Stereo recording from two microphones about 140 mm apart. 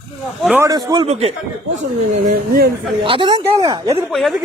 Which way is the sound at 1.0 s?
50° right (ahead or behind).